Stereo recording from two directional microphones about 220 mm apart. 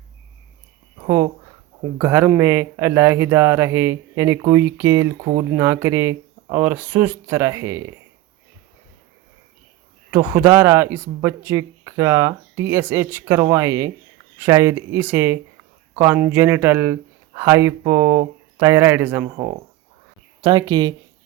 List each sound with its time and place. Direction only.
1.0 s speech: 15° right (ahead or behind)
10.1 s speech: 10° right (ahead or behind)